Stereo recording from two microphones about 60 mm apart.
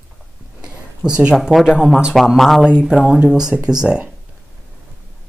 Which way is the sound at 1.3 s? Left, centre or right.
Centre.